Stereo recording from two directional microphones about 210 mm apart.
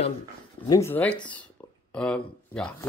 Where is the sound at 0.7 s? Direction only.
15° left (ahead or behind).